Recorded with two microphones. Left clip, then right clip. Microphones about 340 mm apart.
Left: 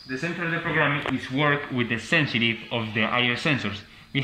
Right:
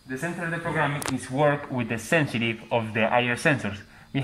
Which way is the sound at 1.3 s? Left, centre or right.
Right.